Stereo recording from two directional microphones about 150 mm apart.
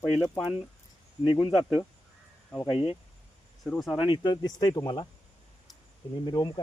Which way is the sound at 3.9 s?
30° left (ahead or behind).